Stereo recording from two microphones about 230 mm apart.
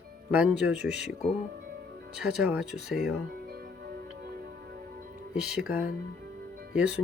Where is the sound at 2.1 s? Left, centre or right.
Centre.